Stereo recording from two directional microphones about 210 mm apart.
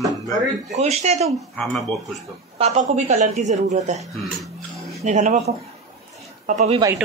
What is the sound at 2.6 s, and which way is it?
A woman's voice, 35° right (ahead or behind).